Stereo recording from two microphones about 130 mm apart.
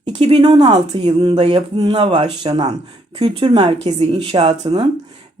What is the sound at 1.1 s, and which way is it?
A woman's voice, 35° right (ahead or behind).